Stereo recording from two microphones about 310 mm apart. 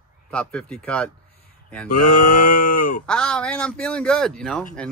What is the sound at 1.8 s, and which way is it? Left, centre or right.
Mantra, left.